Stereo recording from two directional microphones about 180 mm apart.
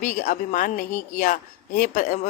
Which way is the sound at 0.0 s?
45° left (ahead or behind).